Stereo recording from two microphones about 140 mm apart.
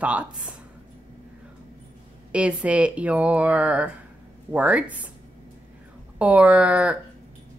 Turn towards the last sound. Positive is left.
turn(degrees=-10)  # may be behind; listen again after turning